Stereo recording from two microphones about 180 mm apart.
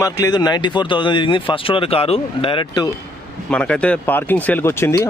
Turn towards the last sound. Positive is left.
turn(degrees=15)  # may be behind; listen again after turning